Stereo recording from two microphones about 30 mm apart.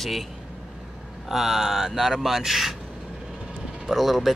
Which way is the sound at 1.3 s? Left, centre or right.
Centre.